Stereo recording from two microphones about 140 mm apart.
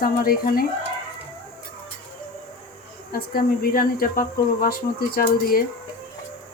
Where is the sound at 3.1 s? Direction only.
90° left.